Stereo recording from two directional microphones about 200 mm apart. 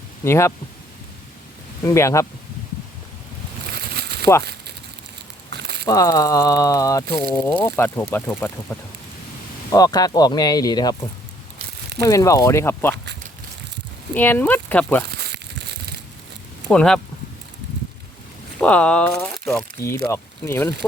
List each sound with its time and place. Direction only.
0.3 s speech: 15° left (ahead or behind)
1.8 s speech: 15° left (ahead or behind)
3.7 s a sound: 55° right (ahead or behind)
5.5 s a sound: 55° right (ahead or behind)
5.8 s speech: 15° left (ahead or behind)
12.0 s speech: 15° left (ahead or behind)
14.1 s speech: 10° left (ahead or behind)
15.2 s crumpling: 55° right (ahead or behind)
16.6 s speech: 5° left (ahead or behind)
18.6 s speech: 5° left (ahead or behind)